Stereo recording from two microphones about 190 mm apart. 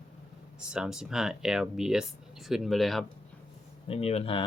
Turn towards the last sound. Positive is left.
turn(degrees=30)  # may be behind; listen again after turning